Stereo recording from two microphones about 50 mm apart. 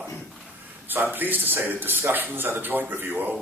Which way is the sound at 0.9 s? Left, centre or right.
Right.